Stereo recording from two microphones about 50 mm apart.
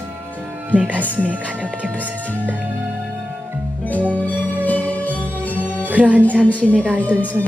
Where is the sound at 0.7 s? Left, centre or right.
Left.